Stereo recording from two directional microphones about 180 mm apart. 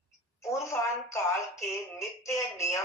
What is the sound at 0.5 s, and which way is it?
Speech, 15° left (ahead or behind).